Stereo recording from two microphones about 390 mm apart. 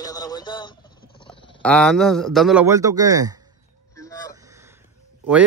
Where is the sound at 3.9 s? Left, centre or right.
Centre.